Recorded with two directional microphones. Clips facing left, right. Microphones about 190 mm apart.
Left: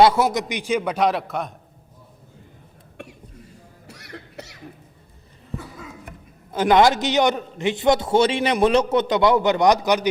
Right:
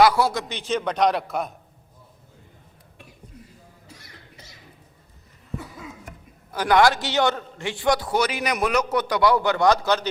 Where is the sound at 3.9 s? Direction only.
70° left (ahead or behind).